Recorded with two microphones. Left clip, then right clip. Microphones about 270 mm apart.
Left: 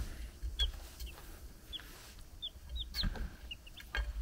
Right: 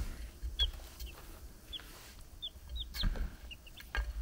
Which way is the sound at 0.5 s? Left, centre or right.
Centre.